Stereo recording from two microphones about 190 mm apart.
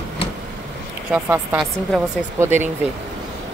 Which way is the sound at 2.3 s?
10° right (ahead or behind).